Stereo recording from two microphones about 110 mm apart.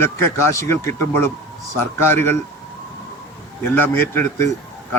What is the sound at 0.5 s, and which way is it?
Speech, 25° left (ahead or behind).